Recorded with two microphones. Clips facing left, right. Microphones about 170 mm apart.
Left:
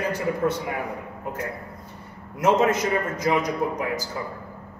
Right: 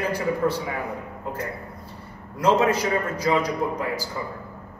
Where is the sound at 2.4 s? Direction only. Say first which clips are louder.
Even; 20° left (ahead or behind).